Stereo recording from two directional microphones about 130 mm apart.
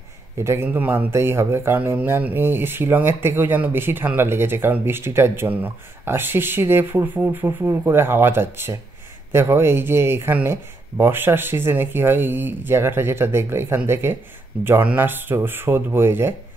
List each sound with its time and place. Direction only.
0.4 s speech: 20° right (ahead or behind)